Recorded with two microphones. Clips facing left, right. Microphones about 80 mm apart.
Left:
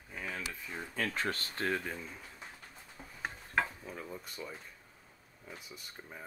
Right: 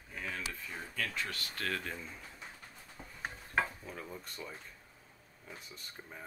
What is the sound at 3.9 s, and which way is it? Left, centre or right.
Speech, centre.